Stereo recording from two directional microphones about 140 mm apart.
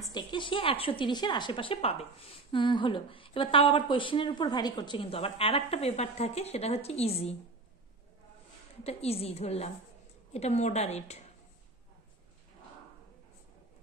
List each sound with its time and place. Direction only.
0.1 s a woman's voice: 35° left (ahead or behind)
8.8 s a woman's voice: 45° left (ahead or behind)